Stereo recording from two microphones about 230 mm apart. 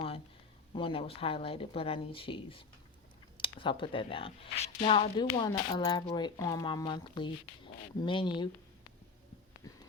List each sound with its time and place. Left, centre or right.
0.7 s speech: left